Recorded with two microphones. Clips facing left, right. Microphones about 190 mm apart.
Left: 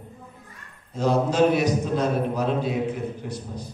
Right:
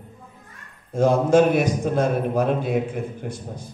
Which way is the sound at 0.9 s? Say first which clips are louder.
Right 5 dB; 50° right (ahead or behind).